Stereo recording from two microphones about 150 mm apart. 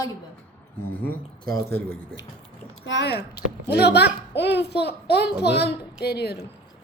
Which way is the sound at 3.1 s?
90° left.